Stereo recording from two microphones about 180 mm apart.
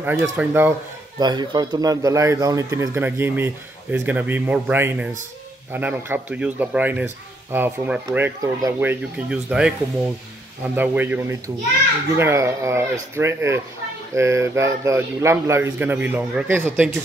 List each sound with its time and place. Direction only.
0.0 s speech: 10° right (ahead or behind)
1.2 s speech: 25° right (ahead or behind)
8.4 s speech: 20° right (ahead or behind)